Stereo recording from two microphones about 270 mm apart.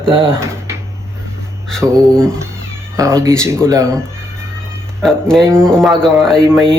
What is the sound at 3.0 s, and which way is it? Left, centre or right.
Speech, centre.